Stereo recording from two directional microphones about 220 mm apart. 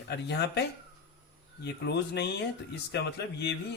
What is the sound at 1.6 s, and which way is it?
Speech, 50° left (ahead or behind).